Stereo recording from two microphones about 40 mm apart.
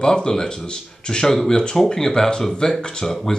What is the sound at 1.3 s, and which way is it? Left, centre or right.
Speech, centre.